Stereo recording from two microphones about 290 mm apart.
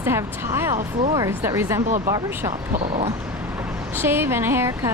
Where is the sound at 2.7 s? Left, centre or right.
Right.